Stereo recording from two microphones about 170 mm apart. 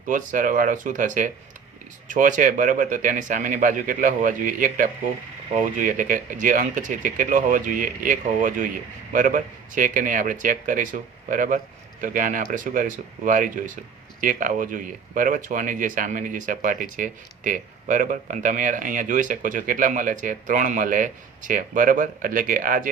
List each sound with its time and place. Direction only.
0.1 s speech: 50° right (ahead or behind)